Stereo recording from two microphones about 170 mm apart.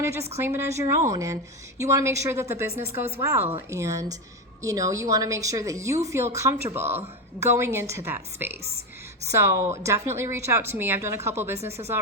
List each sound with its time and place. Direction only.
0.0 s a woman's voice: 15° right (ahead or behind)